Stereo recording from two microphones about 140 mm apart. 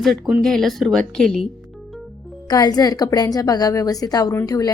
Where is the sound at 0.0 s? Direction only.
Centre (ahead or behind).